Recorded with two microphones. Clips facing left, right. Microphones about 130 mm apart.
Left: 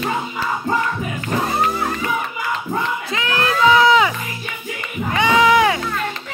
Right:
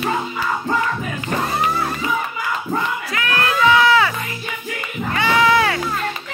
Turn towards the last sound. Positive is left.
turn(degrees=15)  # may be behind; listen again after turning